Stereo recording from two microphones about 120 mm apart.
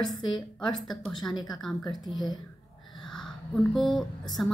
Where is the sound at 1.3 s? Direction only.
35° left (ahead or behind).